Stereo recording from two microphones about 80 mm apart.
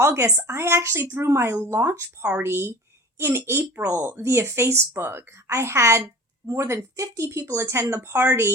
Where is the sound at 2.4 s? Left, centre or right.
Right.